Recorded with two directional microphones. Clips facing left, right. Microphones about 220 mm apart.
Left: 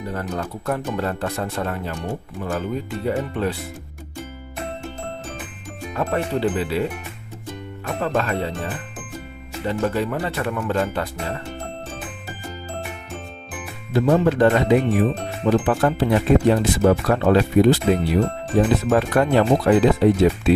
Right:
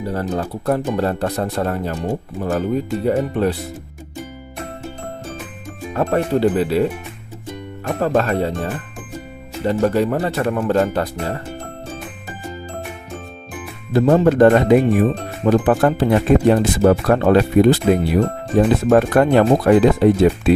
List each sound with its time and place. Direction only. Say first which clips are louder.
0.0 s speech: right 5 dB; 35° right (ahead or behind)
5.9 s speech: right 5 dB; 40° right (ahead or behind)
7.9 s speech: right 5 dB; 40° right (ahead or behind)
9.6 s speech: right 6 dB; 40° right (ahead or behind)
13.9 s speech: right 4 dB; 45° right (ahead or behind)